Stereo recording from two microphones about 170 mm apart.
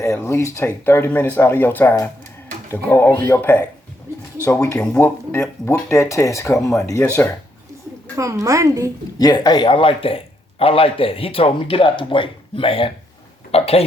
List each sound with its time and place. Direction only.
0.0 s speech: 15° left (ahead or behind)
4.1 s a sound: 15° right (ahead or behind)
4.4 s speech: 15° left (ahead or behind)
8.1 s a woman's voice: 20° right (ahead or behind)
9.1 s a man's voice: 25° left (ahead or behind)